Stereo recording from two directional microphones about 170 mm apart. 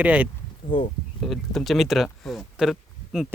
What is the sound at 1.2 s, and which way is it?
Speech, centre (ahead or behind).